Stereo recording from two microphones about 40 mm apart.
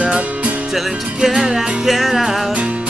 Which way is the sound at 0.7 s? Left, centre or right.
Centre.